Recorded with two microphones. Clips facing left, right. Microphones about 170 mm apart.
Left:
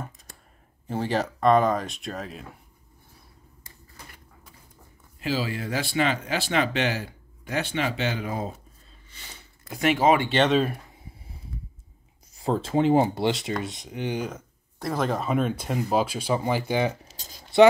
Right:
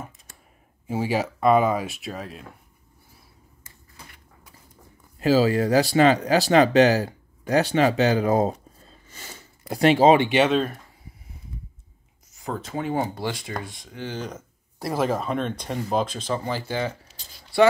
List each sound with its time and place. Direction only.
0.8 s speech: 10° right (ahead or behind)
5.2 s speech: 40° right (ahead or behind)
8.8 s a sound: 45° right (ahead or behind); by 10.3 s 25° right (ahead or behind)
10.3 s speech: 5° right (ahead or behind)
12.4 s speech: 30° left (ahead or behind)
14.3 s speech: 10° right (ahead or behind); by 17.1 s 20° left (ahead or behind)
17.2 s a sound: 45° left (ahead or behind)